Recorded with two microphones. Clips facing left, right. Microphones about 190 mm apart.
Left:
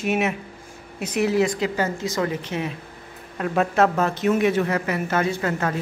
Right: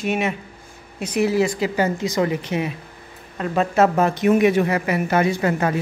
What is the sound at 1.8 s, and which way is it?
Speech, 15° right (ahead or behind).